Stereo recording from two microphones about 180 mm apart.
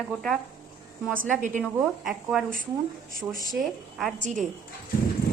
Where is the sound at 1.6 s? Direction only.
Centre (ahead or behind).